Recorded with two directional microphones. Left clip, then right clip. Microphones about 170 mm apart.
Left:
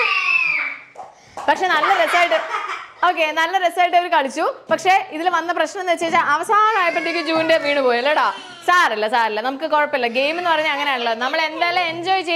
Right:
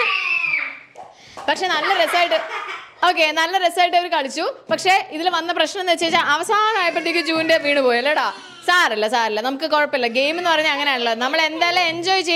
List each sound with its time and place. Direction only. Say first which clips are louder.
1.5 s a woman's voice: left 3 dB; 10° right (ahead or behind)
4.7 s a woman's voice: even; 20° right (ahead or behind)
7.0 s a woman's voice: even; 30° right (ahead or behind)